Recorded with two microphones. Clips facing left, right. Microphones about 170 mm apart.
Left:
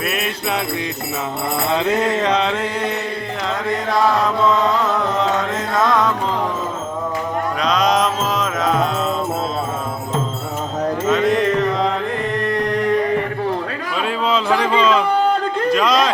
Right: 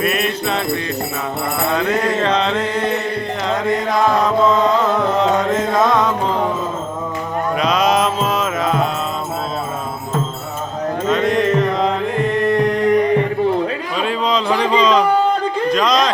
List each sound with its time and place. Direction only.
0.0 s music: 5° left (ahead or behind)
1.7 s mantra: 20° left (ahead or behind)
2.3 s music: 10° left (ahead or behind)
7.6 s music: 5° right (ahead or behind)
11.1 s mantra: centre (ahead or behind)
12.6 s music: 20° right (ahead or behind)
14.0 s a sound: 5° left (ahead or behind)